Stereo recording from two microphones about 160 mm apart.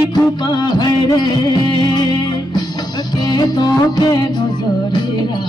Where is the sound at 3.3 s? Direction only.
25° left (ahead or behind).